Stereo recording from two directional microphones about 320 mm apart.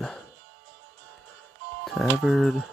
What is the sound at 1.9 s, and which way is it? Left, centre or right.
Speech, centre.